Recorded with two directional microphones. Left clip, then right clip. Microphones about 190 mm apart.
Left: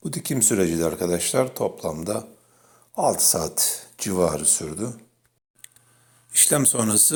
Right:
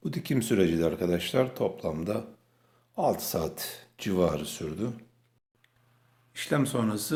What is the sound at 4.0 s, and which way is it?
Speech, 10° left (ahead or behind).